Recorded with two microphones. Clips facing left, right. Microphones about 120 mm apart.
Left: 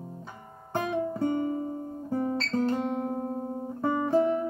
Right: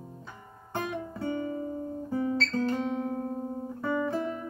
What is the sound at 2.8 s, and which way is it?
Music, 45° left (ahead or behind).